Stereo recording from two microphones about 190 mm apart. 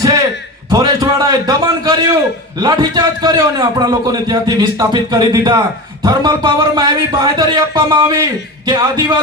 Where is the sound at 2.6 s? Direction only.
25° right (ahead or behind).